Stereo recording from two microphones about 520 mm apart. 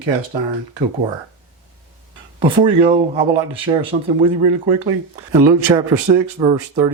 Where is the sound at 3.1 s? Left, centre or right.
Right.